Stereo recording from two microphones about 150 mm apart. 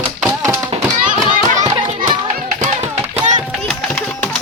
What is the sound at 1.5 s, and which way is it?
Children playing, 25° right (ahead or behind).